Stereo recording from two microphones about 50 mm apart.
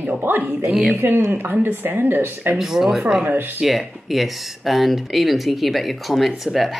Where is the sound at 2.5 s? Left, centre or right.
Centre.